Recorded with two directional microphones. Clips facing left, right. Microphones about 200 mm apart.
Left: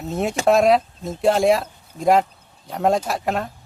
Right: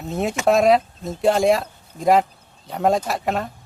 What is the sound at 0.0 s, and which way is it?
Speech, centre (ahead or behind).